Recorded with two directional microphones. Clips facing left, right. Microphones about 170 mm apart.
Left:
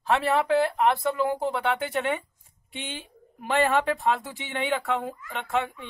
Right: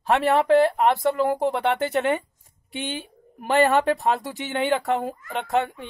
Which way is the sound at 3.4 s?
40° right (ahead or behind).